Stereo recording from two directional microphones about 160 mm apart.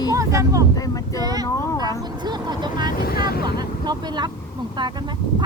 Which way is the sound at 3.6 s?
25° right (ahead or behind).